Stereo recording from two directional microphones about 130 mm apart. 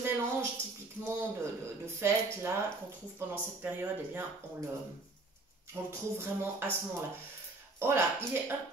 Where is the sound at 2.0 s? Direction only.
20° right (ahead or behind).